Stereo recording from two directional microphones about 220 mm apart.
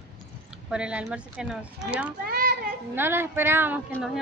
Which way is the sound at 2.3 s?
45° right (ahead or behind).